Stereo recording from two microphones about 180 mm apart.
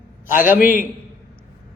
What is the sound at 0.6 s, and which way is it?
Speech, 50° left (ahead or behind).